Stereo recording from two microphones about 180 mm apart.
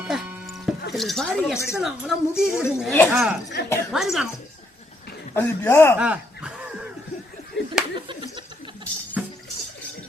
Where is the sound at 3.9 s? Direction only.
Centre (ahead or behind).